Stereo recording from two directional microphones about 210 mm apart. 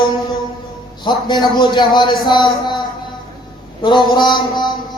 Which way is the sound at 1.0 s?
20° left (ahead or behind).